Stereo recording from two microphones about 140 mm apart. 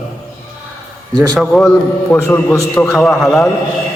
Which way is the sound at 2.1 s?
20° left (ahead or behind).